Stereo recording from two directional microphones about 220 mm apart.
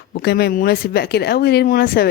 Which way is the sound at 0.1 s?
45° left (ahead or behind).